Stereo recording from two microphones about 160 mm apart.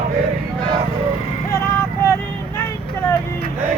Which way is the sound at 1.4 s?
15° left (ahead or behind).